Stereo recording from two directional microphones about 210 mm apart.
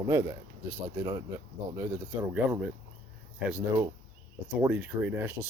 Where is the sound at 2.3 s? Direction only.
5° right (ahead or behind).